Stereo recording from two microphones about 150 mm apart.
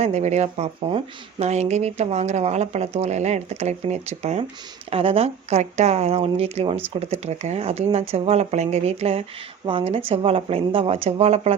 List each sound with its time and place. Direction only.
0.0 s a woman's voice: 50° right (ahead or behind)